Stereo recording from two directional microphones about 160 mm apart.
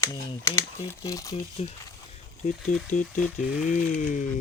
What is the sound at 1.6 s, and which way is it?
Speech, 40° left (ahead or behind).